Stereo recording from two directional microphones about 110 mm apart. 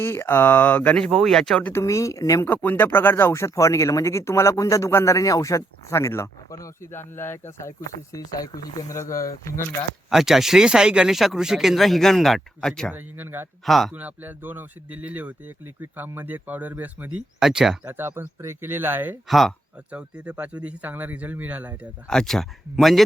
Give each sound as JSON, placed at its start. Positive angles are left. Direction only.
{"t": 0.0, "sound": "speech", "side_deg": 25}
{"t": 1.7, "sound": "speech", "side_deg": 30}
{"t": 2.4, "sound": "speech", "side_deg": 20}
{"t": 10.1, "sound": "speech", "side_deg": -5}
{"t": 12.9, "sound": "speech", "side_deg": -15}
{"t": 13.7, "sound": "speech", "side_deg": 0}
{"t": 13.9, "sound": "speech", "side_deg": -15}
{"t": 17.4, "sound": "speech", "side_deg": -5}
{"t": 17.8, "sound": "speech", "side_deg": -20}
{"t": 19.3, "sound": "speech", "side_deg": 0}
{"t": 19.9, "sound": "speech", "side_deg": -10}
{"t": 22.0, "sound": "speech", "side_deg": 5}